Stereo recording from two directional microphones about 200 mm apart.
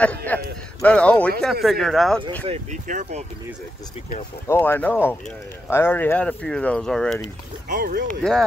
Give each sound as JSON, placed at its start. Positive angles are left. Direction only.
{"t": 0.0, "sound": "speech", "side_deg": 10}
{"t": 2.4, "sound": "speech", "side_deg": -35}
{"t": 4.5, "sound": "speech", "side_deg": 10}
{"t": 7.6, "sound": "speech", "side_deg": -45}
{"t": 8.2, "sound": "speech", "side_deg": 0}